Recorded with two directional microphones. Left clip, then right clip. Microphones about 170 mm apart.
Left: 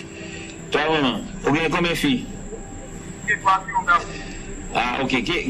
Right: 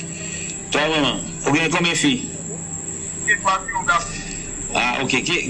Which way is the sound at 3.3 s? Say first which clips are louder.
Even; 20° right (ahead or behind).